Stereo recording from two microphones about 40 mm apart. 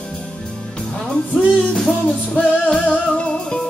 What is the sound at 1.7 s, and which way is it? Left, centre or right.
Music, centre.